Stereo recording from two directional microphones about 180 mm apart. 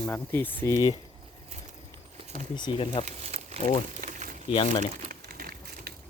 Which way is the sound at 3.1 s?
35° right (ahead or behind).